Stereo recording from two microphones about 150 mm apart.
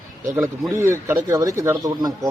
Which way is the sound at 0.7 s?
20° right (ahead or behind).